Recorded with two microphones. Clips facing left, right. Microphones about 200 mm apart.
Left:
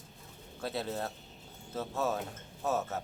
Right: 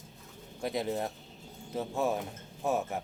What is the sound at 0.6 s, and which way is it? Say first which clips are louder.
Speech: right 4 dB; 15° right (ahead or behind).